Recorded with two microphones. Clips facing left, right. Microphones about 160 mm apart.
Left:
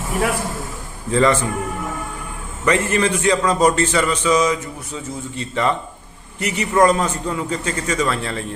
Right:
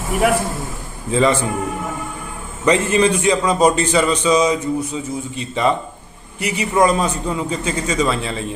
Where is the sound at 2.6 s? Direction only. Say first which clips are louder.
Right 3 dB; 20° right (ahead or behind).